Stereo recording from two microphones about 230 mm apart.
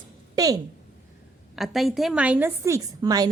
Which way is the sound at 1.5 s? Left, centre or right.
Centre.